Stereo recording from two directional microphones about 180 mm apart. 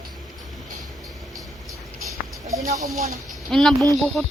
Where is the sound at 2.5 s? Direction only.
20° right (ahead or behind).